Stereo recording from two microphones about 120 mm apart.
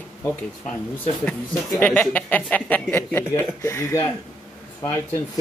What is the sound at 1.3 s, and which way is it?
Speech, 10° left (ahead or behind).